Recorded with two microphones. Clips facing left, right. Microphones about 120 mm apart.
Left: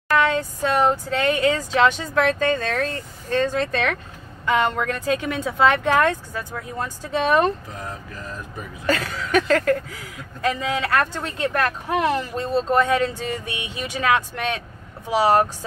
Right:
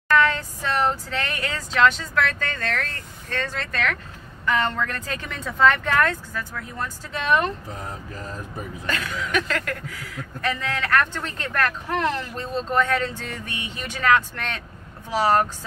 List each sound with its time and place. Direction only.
0.1 s speech: 15° left (ahead or behind)
7.2 s speech: 35° left (ahead or behind)
8.8 s speech: 35° left (ahead or behind); by 15.4 s 15° left (ahead or behind)